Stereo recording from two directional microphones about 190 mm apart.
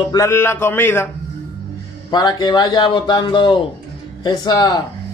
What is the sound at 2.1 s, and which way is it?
Speech, 20° left (ahead or behind).